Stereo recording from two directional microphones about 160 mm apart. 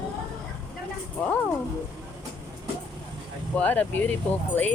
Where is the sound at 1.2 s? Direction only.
10° left (ahead or behind).